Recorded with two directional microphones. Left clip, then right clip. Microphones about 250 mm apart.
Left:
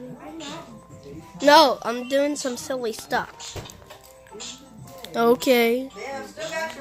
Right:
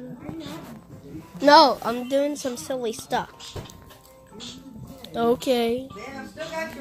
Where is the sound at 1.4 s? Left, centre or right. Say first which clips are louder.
Even; centre.